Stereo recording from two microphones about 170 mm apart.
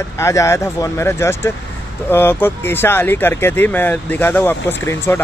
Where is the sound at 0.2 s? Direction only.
15° left (ahead or behind).